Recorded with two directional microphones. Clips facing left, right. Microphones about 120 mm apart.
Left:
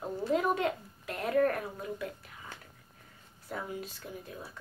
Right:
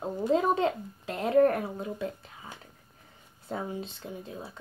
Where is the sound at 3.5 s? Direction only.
25° right (ahead or behind).